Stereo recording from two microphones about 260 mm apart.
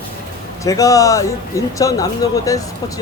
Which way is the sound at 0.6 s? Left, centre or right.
Centre.